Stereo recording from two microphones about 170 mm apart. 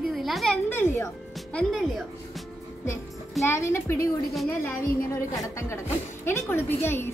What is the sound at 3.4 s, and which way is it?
Speech, 15° left (ahead or behind).